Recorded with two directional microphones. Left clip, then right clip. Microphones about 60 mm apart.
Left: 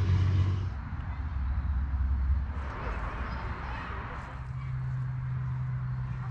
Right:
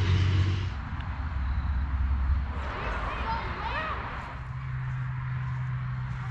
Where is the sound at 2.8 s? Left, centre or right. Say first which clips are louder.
Right 5 dB; left.